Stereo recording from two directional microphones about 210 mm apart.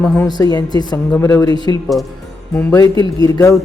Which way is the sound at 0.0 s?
5° left (ahead or behind).